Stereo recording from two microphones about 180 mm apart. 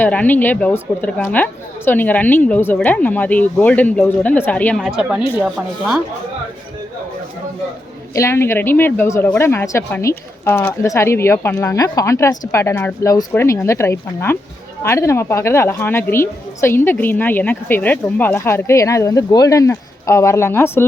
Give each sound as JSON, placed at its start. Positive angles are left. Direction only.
{"t": 0.0, "sound": "a woman's voice", "side_deg": 10}
{"t": 8.1, "sound": "a woman's voice", "side_deg": 15}